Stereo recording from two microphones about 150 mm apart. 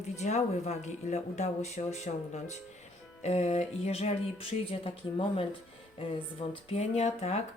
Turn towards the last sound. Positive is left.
turn(degrees=45)  # may be behind; listen again after turning